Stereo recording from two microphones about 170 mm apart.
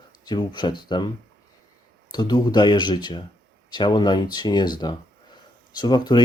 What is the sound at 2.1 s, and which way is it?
Speech, 25° left (ahead or behind).